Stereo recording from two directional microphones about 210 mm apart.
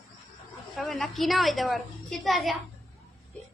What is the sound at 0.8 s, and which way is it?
A woman's voice, centre (ahead or behind).